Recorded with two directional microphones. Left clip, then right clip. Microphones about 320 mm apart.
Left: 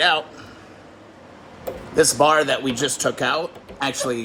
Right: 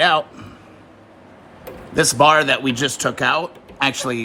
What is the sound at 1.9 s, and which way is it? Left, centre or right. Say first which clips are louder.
Speech: right 3 dB; centre.